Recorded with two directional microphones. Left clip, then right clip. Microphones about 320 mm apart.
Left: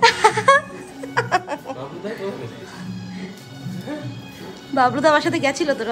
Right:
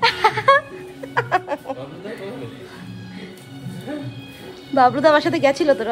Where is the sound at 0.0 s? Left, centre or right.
Centre.